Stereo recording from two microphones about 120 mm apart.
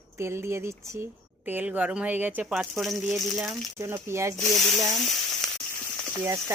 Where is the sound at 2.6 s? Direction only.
Centre (ahead or behind).